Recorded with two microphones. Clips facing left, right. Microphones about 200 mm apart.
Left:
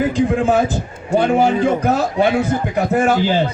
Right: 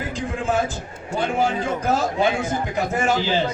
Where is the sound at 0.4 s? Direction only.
65° left (ahead or behind).